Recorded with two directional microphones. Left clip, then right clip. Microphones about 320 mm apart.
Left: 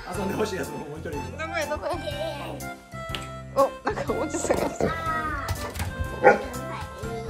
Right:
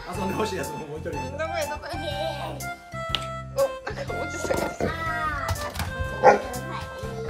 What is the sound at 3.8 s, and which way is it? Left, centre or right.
Music, centre.